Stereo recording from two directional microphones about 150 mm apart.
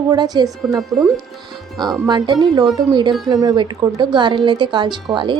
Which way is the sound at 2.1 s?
30° right (ahead or behind).